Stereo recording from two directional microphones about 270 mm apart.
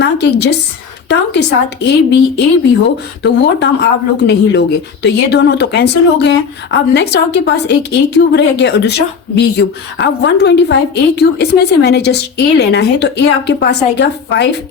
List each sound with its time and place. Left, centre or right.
0.0 s speech: left